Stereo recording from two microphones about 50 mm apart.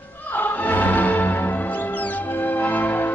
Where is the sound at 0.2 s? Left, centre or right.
Left.